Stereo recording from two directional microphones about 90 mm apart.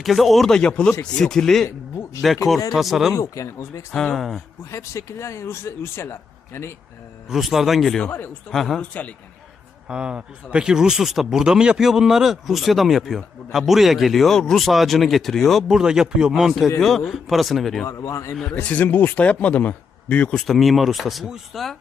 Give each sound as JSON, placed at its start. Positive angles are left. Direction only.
{"t": 0.0, "sound": "speech", "side_deg": 0}
{"t": 3.2, "sound": "speech", "side_deg": 35}
{"t": 3.9, "sound": "speech", "side_deg": 5}
{"t": 4.7, "sound": "speech", "side_deg": 35}
{"t": 7.3, "sound": "speech", "side_deg": -5}
{"t": 8.8, "sound": "speech", "side_deg": 15}
{"t": 9.9, "sound": "speech", "side_deg": -10}
{"t": 17.8, "sound": "speech", "side_deg": 35}
{"t": 18.5, "sound": "speech", "side_deg": 20}
{"t": 20.4, "sound": "speech", "side_deg": 0}